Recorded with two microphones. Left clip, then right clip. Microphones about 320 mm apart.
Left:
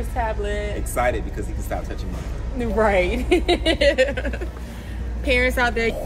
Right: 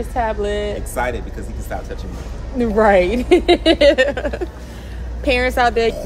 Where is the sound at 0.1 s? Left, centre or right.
Right.